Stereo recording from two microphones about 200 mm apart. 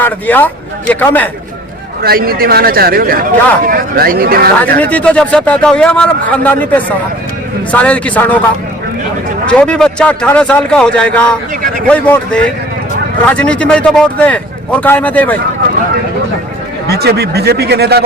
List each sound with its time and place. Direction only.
0.0 s speech: 10° left (ahead or behind)
2.0 s a man's voice: 45° right (ahead or behind)
4.8 s speech: 5° left (ahead or behind)
9.5 s a man's voice: 5° left (ahead or behind)
16.9 s a man's voice: 55° right (ahead or behind)